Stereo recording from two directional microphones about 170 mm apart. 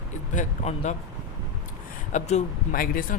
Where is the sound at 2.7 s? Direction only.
55° left (ahead or behind).